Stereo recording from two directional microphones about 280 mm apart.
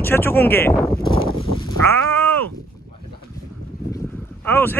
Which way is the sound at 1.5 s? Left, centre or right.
Right.